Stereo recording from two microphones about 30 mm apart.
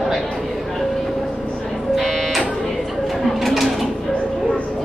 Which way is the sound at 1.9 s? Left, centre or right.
Centre.